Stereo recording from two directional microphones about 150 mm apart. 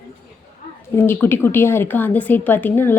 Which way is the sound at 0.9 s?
15° left (ahead or behind).